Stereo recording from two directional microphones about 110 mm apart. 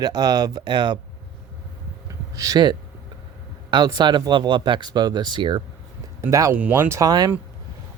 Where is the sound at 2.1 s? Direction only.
30° right (ahead or behind).